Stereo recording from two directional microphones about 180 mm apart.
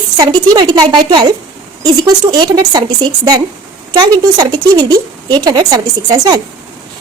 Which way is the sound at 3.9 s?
20° right (ahead or behind).